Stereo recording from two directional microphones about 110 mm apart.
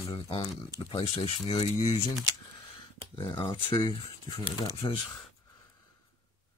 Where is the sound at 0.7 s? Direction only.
45° left (ahead or behind).